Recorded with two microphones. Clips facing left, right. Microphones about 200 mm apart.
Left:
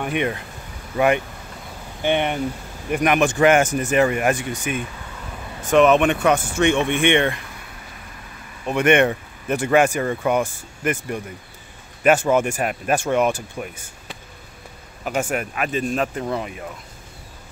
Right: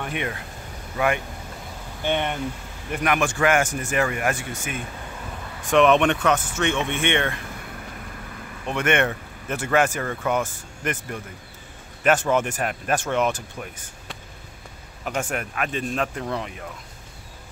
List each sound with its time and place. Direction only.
0.0 s speech: 20° left (ahead or behind)
5.6 s speech: centre (ahead or behind)
8.6 s speech: 15° left (ahead or behind)